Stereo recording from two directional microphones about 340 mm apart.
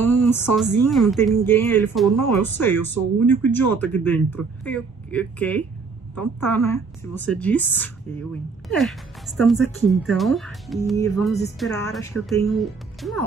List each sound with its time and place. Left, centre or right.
0.3 s a woman's voice: centre
10.0 s speech: centre